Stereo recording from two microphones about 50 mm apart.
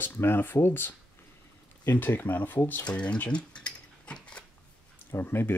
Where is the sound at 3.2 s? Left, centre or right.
Left.